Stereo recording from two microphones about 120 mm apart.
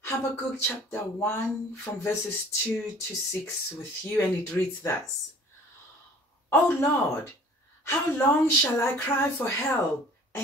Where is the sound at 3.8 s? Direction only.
20° left (ahead or behind).